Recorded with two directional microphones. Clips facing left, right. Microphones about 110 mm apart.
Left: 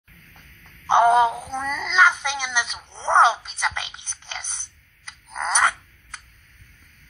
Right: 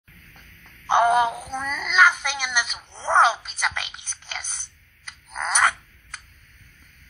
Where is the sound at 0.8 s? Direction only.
20° left (ahead or behind).